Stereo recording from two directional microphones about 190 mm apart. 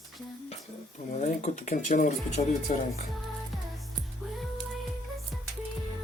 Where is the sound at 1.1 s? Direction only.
35° left (ahead or behind).